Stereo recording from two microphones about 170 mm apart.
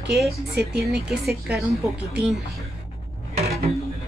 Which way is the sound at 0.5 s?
70° right (ahead or behind).